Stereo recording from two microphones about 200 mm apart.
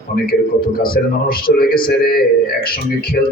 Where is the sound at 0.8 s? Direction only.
45° left (ahead or behind).